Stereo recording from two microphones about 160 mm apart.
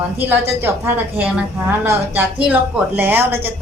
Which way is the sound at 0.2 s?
10° right (ahead or behind).